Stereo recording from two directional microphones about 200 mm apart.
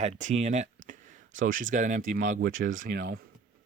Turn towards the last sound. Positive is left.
turn(degrees=-50)  # may be behind; listen again after turning